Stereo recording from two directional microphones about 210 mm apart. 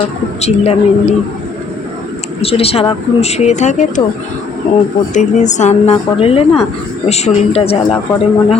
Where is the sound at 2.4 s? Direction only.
30° left (ahead or behind).